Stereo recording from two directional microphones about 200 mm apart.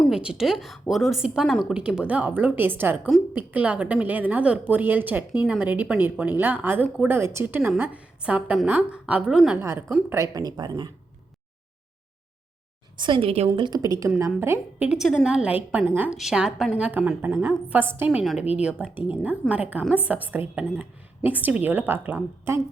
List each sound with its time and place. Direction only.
0.0 s a woman's voice: 5° right (ahead or behind); by 10.9 s 20° right (ahead or behind)
13.0 s a woman's voice: 25° right (ahead or behind)